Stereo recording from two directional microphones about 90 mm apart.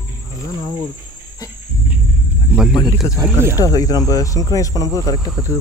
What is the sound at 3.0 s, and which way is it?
Speech, 40° left (ahead or behind).